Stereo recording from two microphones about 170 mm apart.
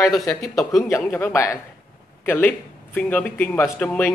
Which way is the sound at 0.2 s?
20° left (ahead or behind).